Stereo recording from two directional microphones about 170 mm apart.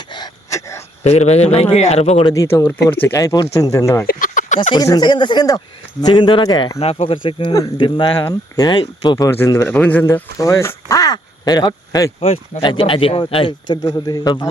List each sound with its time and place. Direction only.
0.1 s wail: 20° left (ahead or behind)
1.0 s speech: 40° left (ahead or behind)
2.2 s speech: 20° left (ahead or behind)
4.0 s a sound: 55° left (ahead or behind)
4.7 s speech: 25° left (ahead or behind)
12.2 s speech: 35° left (ahead or behind)
13.8 s speech: 20° left (ahead or behind)